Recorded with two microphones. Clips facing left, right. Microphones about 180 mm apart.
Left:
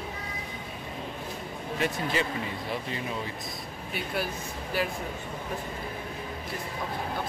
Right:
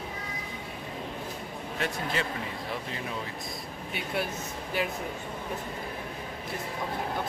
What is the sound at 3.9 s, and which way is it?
Speech, 20° right (ahead or behind).